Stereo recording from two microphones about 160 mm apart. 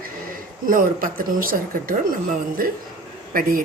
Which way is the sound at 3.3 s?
60° right (ahead or behind).